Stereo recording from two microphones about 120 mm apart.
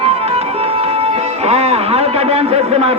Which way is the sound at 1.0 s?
60° right (ahead or behind).